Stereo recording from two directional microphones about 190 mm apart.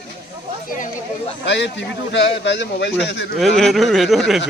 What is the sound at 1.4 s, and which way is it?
Speech, 70° left (ahead or behind).